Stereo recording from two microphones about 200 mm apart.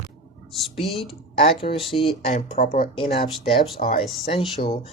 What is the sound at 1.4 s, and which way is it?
Speech, 30° left (ahead or behind).